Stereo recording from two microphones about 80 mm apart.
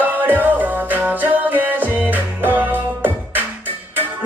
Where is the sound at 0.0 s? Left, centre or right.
Right.